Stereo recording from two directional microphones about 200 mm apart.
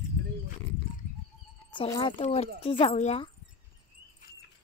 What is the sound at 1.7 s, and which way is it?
Speech, 20° left (ahead or behind).